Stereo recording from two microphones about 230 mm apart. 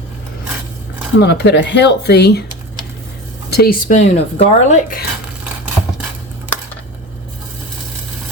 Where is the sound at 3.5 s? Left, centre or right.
Left.